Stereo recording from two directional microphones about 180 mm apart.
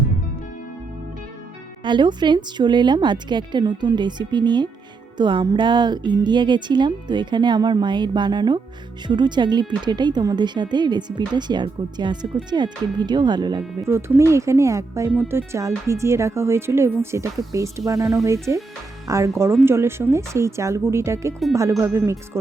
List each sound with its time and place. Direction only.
1.8 s speech: 25° right (ahead or behind)